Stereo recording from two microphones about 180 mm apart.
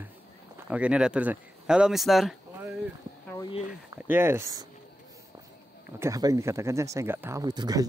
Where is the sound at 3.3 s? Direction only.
25° left (ahead or behind).